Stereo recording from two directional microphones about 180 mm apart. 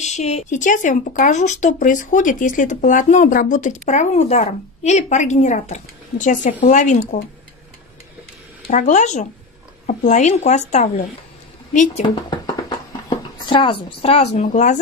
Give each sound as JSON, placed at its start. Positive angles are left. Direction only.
{"t": 0.0, "sound": "speech", "side_deg": 40}
{"t": 8.6, "sound": "a woman's voice", "side_deg": 40}
{"t": 12.3, "sound": "a sound", "side_deg": 25}
{"t": 13.5, "sound": "a woman's voice", "side_deg": 30}